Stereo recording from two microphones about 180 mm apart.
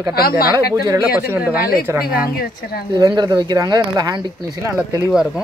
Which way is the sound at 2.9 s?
25° right (ahead or behind).